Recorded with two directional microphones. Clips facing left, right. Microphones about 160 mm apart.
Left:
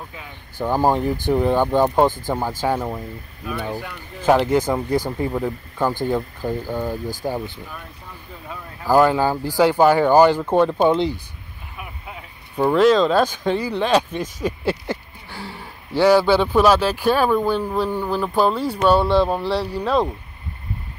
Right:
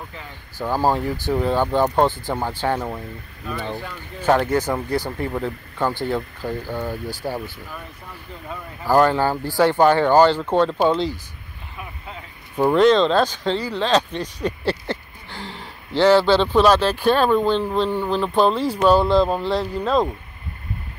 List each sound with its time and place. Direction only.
0.6 s speech: 15° left (ahead or behind)
8.8 s speech: 10° left (ahead or behind)
11.7 s vehicle: 10° left (ahead or behind)
12.5 s speech: centre (ahead or behind)